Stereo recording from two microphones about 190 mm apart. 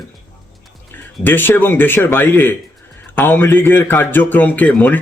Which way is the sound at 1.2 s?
10° left (ahead or behind).